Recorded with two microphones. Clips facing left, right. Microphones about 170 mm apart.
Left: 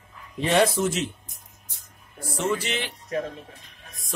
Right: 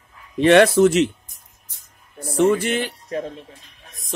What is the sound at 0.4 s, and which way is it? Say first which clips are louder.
Speech: right 9 dB; 70° right (ahead or behind).